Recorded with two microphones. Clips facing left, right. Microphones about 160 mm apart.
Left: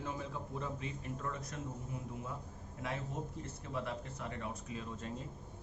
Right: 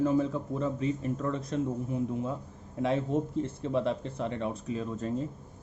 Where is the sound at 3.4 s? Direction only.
25° right (ahead or behind).